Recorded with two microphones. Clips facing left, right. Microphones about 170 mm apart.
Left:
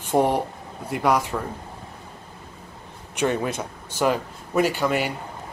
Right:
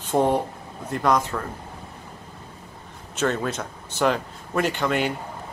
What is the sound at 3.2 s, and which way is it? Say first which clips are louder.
Speech: left 1 dB; 15° left (ahead or behind).